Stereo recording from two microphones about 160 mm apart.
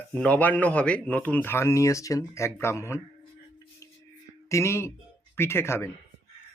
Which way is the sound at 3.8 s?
20° left (ahead or behind).